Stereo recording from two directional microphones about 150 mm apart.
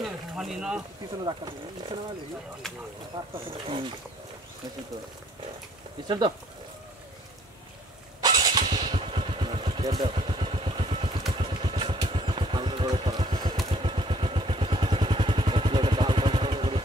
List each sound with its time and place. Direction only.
0.0 s a sound: centre (ahead or behind)
1.2 s speech: 30° right (ahead or behind)
2.6 s speech: centre (ahead or behind)
3.2 s speech: 25° right (ahead or behind)
6.0 s speech: 30° right (ahead or behind)
8.2 s motorcycle: 25° right (ahead or behind)
11.3 s vehicle: 35° right (ahead or behind)